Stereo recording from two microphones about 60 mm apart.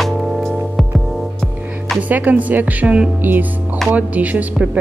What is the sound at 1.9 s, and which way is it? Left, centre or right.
Speech, right.